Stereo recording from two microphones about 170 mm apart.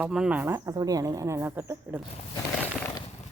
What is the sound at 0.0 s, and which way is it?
Speech, 5° right (ahead or behind).